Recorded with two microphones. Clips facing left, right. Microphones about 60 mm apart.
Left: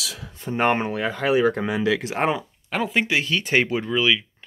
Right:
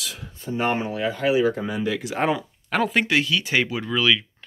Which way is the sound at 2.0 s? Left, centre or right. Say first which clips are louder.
Even; left.